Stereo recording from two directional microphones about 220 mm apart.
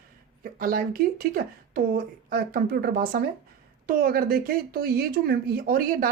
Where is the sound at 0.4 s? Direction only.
40° right (ahead or behind).